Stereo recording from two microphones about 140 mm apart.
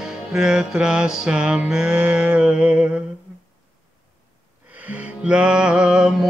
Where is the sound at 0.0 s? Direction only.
5° right (ahead or behind).